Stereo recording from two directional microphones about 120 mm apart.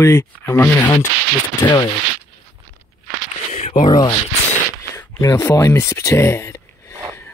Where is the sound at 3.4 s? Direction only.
75° left (ahead or behind).